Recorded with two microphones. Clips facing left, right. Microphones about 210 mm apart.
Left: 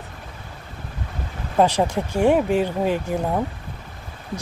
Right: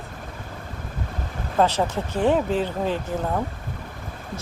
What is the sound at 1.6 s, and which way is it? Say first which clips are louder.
Speech: left 3 dB; 15° left (ahead or behind).